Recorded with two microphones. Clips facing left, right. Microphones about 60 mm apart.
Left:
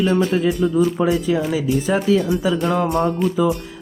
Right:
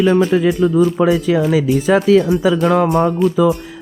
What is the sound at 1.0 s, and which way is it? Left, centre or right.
Speech, right.